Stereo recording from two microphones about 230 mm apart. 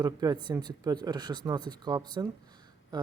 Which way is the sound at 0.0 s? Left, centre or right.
Centre.